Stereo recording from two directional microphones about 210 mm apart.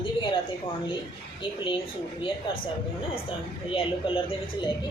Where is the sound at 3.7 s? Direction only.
25° left (ahead or behind).